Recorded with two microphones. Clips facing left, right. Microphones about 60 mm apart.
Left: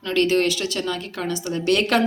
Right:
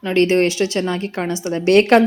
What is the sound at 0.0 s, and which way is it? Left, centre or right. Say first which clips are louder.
Speech: right 4 dB; right.